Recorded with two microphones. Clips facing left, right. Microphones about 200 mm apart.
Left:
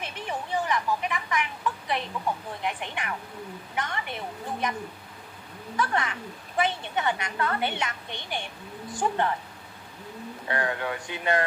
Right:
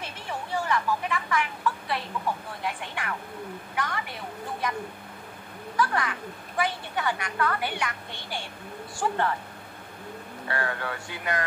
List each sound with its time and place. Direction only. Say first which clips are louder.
0.0 s a sound: left 2 dB; 20° left (ahead or behind)
2.6 s a woman's voice: left 1 dB; 20° left (ahead or behind)
5.8 s a woman's voice: right 1 dB; 25° left (ahead or behind)
10.5 s a woman's voice: left 2 dB; 20° left (ahead or behind)